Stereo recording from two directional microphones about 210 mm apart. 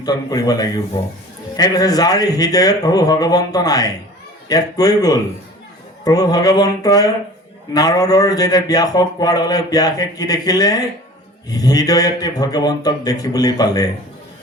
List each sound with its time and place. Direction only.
0.0 s a man's voice: 20° left (ahead or behind)